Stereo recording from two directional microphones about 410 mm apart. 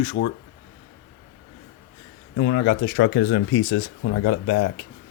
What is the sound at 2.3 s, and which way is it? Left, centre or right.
Speech, left.